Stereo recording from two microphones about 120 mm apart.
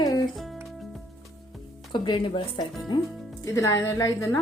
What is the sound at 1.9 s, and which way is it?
Speech, 40° left (ahead or behind).